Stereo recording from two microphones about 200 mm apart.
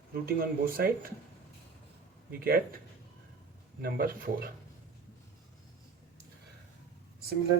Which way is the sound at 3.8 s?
50° right (ahead or behind).